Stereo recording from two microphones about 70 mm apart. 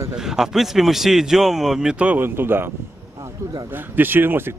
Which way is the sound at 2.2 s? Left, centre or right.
Right.